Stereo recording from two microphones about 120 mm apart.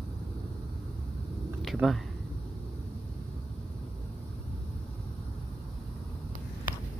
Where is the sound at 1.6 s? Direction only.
Centre (ahead or behind).